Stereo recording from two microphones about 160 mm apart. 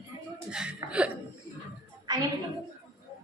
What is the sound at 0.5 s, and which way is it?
Speech, 5° right (ahead or behind).